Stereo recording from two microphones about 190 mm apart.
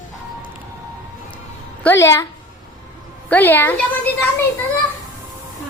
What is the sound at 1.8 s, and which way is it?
Speech, 10° left (ahead or behind).